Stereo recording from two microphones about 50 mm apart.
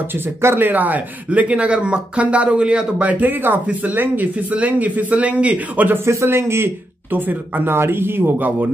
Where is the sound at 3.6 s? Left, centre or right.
Right.